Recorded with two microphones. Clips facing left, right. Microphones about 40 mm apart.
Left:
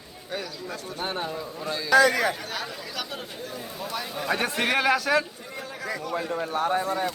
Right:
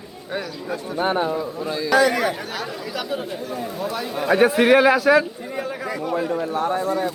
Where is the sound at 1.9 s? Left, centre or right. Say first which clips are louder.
Right 1 dB; right.